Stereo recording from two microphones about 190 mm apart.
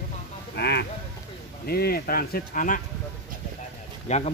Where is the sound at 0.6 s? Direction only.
60° left (ahead or behind); by 2.8 s 45° left (ahead or behind).